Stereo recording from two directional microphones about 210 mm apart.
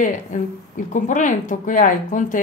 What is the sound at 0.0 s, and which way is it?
A woman's voice, 35° left (ahead or behind).